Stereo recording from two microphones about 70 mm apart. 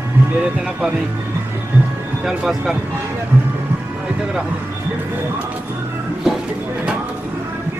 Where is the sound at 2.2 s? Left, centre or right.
Centre.